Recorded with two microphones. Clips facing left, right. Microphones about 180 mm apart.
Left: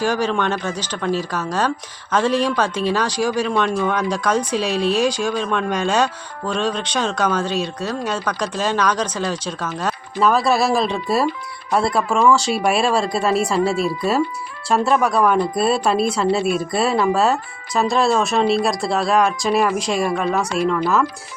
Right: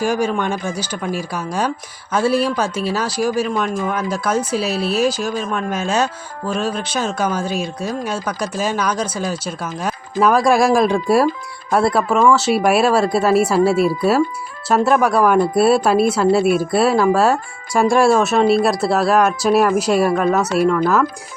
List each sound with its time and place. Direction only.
0.0 s speech: 10° right (ahead or behind)